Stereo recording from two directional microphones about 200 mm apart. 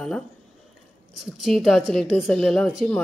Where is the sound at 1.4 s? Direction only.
Centre (ahead or behind).